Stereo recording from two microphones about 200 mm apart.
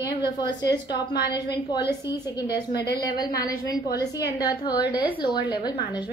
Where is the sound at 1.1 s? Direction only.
55° left (ahead or behind).